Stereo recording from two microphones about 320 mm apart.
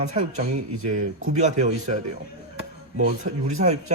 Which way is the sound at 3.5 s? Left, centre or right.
Right.